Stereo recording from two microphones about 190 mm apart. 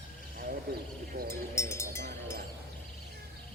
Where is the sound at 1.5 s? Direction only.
15° left (ahead or behind).